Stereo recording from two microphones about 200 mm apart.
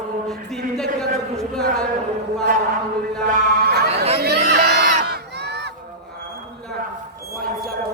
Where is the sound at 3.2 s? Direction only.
50° right (ahead or behind).